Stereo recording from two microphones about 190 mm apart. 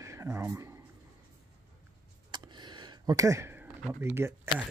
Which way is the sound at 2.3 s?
25° right (ahead or behind).